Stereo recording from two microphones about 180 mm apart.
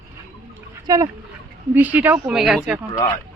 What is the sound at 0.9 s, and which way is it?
Speech, 20° right (ahead or behind).